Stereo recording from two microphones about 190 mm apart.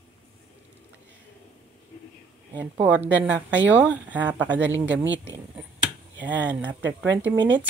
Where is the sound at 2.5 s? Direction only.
10° right (ahead or behind).